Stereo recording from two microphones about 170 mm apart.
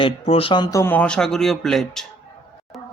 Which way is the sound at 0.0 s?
35° left (ahead or behind).